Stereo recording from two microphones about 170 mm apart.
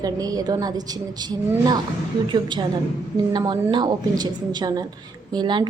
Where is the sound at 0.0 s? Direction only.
20° right (ahead or behind).